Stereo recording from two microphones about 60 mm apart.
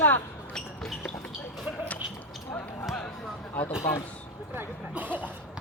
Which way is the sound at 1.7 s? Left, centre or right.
Right.